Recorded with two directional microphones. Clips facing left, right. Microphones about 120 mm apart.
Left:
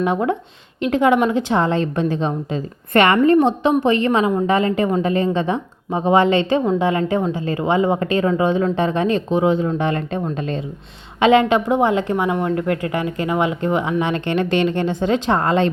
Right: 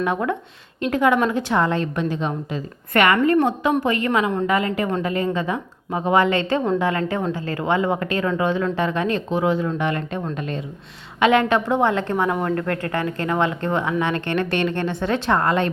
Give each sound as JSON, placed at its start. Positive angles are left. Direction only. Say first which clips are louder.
{"t": 0.0, "sound": "a woman's voice", "louder": "left 3 dB", "side_deg": 25}